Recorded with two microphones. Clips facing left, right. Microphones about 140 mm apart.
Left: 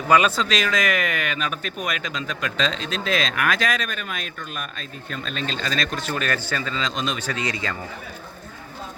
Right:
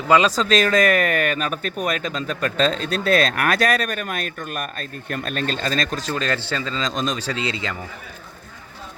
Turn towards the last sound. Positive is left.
turn(degrees=-25)  # may be behind; listen again after turning